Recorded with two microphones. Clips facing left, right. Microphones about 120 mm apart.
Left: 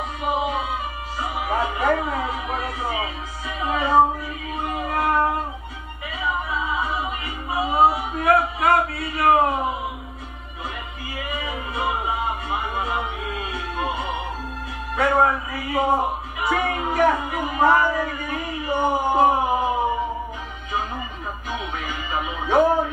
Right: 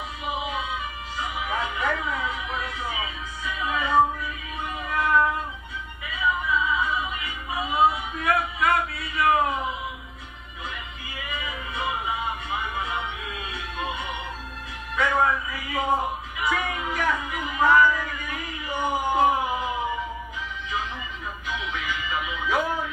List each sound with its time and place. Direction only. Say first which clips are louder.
0.2 s music: left 6 dB; 40° left (ahead or behind)
4.6 s child singing: left 3 dB; 40° left (ahead or behind)
6.0 s music: even; 35° left (ahead or behind)
7.5 s a sound: left 4 dB; 35° left (ahead or behind)
11.1 s music: left 5 dB; 40° left (ahead or behind)
21.5 s music: left 1 dB; 40° left (ahead or behind)